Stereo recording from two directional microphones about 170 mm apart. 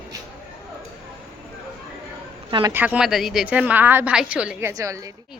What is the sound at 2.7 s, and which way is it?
A woman's voice, 10° right (ahead or behind).